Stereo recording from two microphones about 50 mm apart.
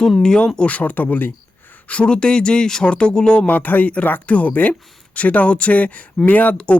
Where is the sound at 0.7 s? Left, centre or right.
Left.